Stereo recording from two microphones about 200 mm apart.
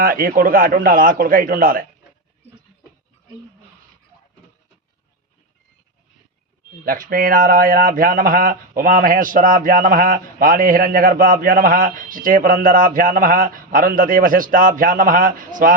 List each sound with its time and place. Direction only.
0.0 s speech: 45° right (ahead or behind)
6.8 s speech: 45° right (ahead or behind)